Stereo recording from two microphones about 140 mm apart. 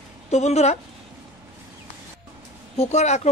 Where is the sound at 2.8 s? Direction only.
55° left (ahead or behind).